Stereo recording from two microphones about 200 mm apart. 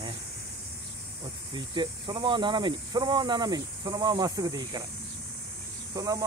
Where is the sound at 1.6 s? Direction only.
25° right (ahead or behind).